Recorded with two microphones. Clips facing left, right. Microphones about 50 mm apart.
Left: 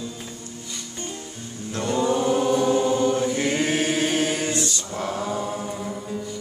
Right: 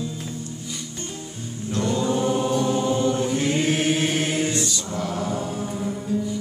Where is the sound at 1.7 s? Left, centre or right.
Left.